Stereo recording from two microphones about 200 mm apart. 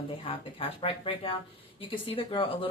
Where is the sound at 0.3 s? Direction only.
25° left (ahead or behind).